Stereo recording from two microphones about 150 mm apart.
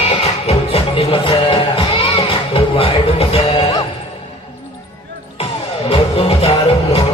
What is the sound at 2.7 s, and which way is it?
Music, 40° left (ahead or behind).